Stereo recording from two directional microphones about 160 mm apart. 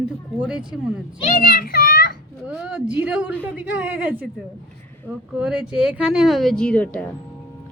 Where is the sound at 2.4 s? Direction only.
5° right (ahead or behind).